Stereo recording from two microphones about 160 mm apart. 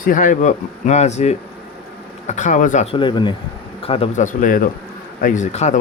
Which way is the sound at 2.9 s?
30° left (ahead or behind).